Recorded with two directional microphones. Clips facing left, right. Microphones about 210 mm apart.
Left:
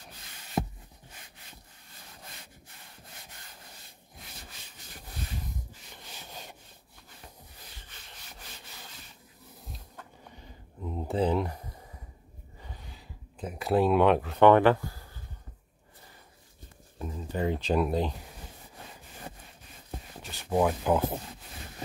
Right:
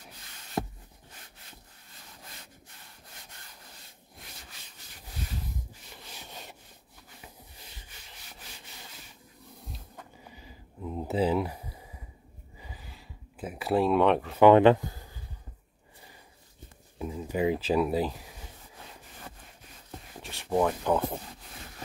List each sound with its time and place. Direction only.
5.9 s rub: centre (ahead or behind)
9.7 s a sound: 5° right (ahead or behind)
14.5 s speech: 20° right (ahead or behind)
17.0 s speech: 10° right (ahead or behind)
20.2 s speech: centre (ahead or behind)